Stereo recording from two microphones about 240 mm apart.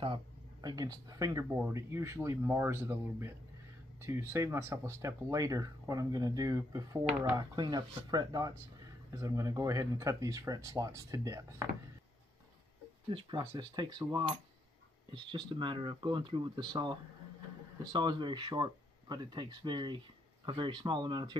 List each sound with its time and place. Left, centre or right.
0.0 s speech: centre
13.1 s speech: centre